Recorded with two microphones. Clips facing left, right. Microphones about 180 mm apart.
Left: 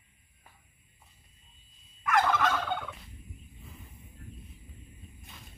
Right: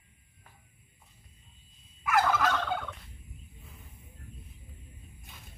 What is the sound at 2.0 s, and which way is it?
Fowl, 5° right (ahead or behind).